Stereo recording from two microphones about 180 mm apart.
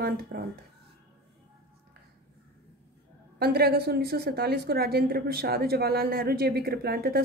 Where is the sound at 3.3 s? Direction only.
60° right (ahead or behind).